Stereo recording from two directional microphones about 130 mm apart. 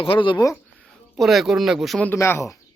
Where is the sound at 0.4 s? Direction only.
15° left (ahead or behind).